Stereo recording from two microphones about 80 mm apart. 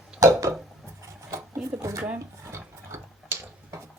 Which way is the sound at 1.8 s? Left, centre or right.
Right.